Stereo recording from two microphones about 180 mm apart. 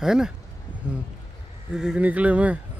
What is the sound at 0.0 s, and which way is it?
Speech, 5° right (ahead or behind).